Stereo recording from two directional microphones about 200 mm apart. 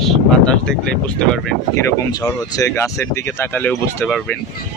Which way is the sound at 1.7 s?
20° left (ahead or behind).